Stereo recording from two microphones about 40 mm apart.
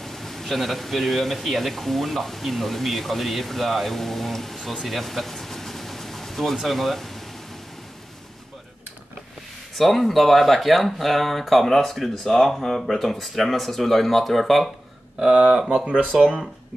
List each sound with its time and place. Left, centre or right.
0.0 s speech: centre
9.8 s speech: centre
15.1 s speech: right